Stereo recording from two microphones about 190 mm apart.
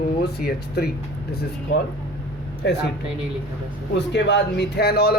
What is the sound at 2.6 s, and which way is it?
Speech, 65° left (ahead or behind).